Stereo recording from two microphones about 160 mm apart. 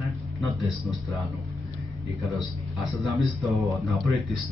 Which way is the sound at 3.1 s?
Centre (ahead or behind).